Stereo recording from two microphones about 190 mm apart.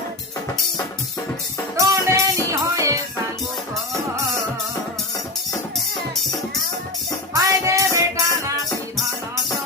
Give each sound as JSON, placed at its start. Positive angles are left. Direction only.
{"t": 1.7, "sound": "music", "side_deg": -15}
{"t": 7.3, "sound": "music", "side_deg": -15}